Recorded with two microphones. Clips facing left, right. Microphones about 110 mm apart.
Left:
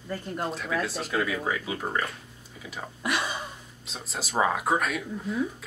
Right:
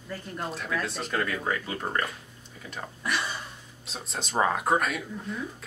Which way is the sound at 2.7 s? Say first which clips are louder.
Left 1 dB; 10° left (ahead or behind).